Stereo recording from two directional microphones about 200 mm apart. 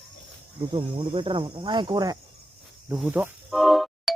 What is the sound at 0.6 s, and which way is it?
Speech, 25° right (ahead or behind).